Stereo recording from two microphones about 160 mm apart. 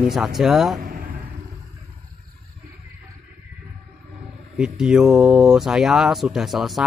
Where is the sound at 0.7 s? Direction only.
60° right (ahead or behind).